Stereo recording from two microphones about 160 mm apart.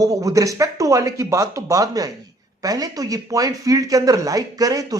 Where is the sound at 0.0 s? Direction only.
20° right (ahead or behind).